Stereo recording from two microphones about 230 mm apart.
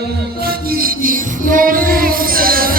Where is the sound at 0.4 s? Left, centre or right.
Right.